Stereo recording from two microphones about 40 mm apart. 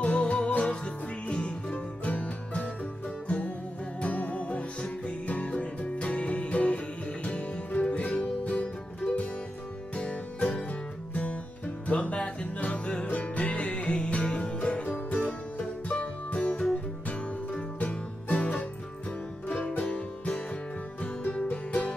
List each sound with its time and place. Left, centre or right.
0.0 s music: left
9.9 s music: left
17.7 s music: left
19.9 s music: left
21.5 s music: left